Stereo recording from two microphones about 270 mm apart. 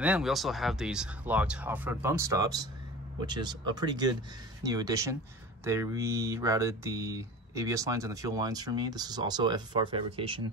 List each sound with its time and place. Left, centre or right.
0.0 s speech: centre